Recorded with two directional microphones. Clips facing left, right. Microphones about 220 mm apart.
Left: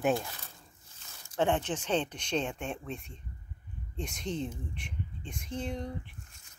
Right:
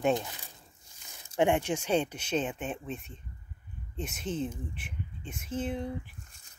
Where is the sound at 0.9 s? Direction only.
15° right (ahead or behind).